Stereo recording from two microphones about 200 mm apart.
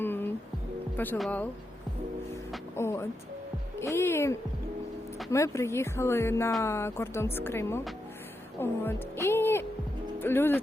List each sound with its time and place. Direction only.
0.0 s music: 10° left (ahead or behind)
0.9 s speech: 10° left (ahead or behind)
2.7 s speech: 15° left (ahead or behind)